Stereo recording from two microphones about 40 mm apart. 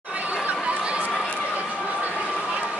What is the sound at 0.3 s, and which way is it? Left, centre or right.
Chatter, right.